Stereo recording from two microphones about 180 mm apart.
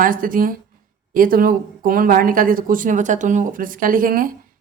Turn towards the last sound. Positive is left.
turn(degrees=-50)  # may be behind; listen again after turning